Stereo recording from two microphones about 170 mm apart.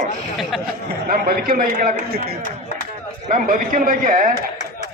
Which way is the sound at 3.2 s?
55° right (ahead or behind).